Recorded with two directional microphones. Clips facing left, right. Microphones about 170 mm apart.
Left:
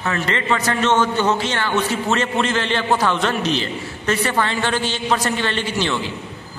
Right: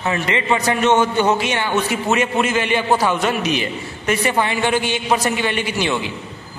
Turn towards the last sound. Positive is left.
turn(degrees=-15)  # may be behind; listen again after turning